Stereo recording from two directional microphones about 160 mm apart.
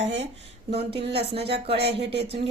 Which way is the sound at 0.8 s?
90° right.